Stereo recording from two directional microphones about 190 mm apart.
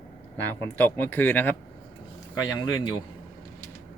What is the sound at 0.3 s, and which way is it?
Speech, 10° left (ahead or behind).